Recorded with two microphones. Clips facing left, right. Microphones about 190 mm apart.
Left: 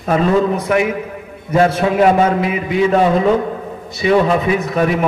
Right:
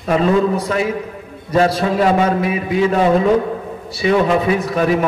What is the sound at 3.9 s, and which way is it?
Speech, 30° right (ahead or behind).